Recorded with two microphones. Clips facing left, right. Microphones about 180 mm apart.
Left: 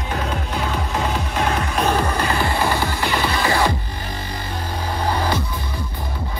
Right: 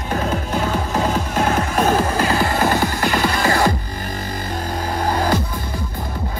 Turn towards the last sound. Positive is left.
turn(degrees=-45)  # may be behind; listen again after turning